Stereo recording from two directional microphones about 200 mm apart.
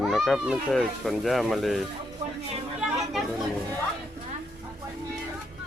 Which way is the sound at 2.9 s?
Centre (ahead or behind).